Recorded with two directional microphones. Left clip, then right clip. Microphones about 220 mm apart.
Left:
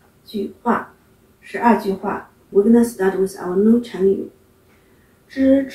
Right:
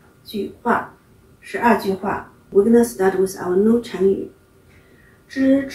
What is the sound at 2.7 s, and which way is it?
Speech, 10° right (ahead or behind).